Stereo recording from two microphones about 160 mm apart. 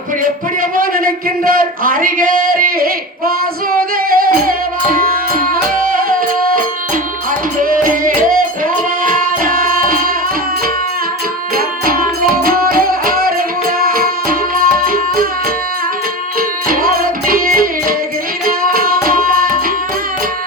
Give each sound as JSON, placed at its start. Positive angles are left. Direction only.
{"t": 0.2, "sound": "a man's voice", "side_deg": -60}
{"t": 3.9, "sound": "music", "side_deg": -65}
{"t": 7.6, "sound": "music", "side_deg": -60}
{"t": 12.3, "sound": "music", "side_deg": -65}
{"t": 16.6, "sound": "music", "side_deg": -65}
{"t": 19.0, "sound": "tabla", "side_deg": -65}